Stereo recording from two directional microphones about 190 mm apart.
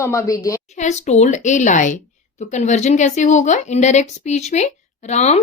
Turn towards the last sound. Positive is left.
turn(degrees=35)  # may be behind; listen again after turning